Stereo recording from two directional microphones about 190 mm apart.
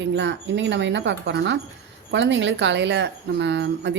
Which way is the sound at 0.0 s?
70° right (ahead or behind).